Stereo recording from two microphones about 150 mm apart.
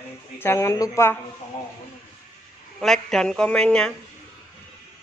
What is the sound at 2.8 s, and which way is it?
A man's voice, 5° left (ahead or behind).